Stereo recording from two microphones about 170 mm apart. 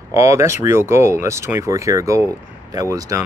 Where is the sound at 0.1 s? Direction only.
15° right (ahead or behind).